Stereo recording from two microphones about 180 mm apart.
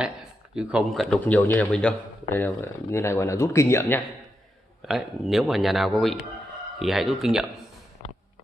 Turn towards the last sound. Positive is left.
turn(degrees=0)  # may be behind; listen again after turning